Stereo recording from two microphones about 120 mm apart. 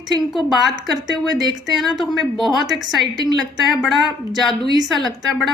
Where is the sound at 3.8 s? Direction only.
Centre (ahead or behind).